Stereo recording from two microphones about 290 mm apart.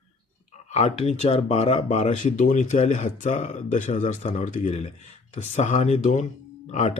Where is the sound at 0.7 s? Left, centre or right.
Left.